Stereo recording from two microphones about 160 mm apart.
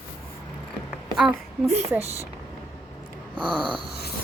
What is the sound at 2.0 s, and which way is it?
Speech, 40° right (ahead or behind).